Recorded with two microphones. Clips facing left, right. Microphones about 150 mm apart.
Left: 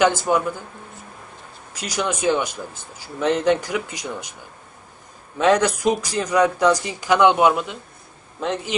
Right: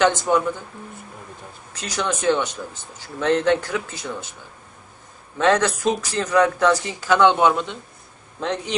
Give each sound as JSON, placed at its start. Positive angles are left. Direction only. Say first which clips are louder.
{"t": 0.0, "sound": "speech", "louder": "even", "side_deg": 10}
{"t": 1.7, "sound": "speech", "louder": "left 1 dB", "side_deg": 10}
{"t": 5.4, "sound": "a man's voice", "louder": "left 1 dB", "side_deg": 15}